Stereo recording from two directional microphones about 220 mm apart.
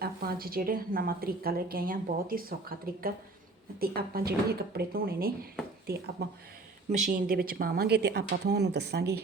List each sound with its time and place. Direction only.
0.0 s a woman's voice: 45° right (ahead or behind)
6.9 s speech: 40° right (ahead or behind)